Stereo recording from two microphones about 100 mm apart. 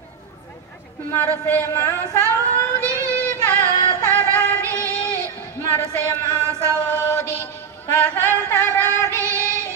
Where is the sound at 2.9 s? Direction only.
30° right (ahead or behind).